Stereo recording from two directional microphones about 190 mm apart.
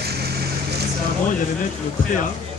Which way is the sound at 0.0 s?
55° right (ahead or behind).